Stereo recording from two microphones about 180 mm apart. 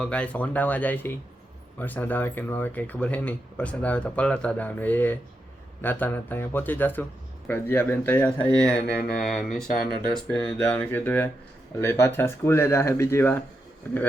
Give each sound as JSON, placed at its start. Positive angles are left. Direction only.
{"t": 0.0, "sound": "speech", "side_deg": 5}
{"t": 8.7, "sound": "mantra", "side_deg": 60}
{"t": 9.0, "sound": "speech", "side_deg": 5}